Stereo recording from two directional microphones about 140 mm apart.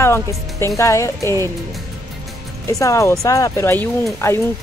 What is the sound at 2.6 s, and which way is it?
Speech, 20° left (ahead or behind).